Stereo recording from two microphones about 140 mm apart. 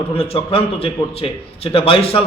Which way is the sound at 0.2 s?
45° left (ahead or behind).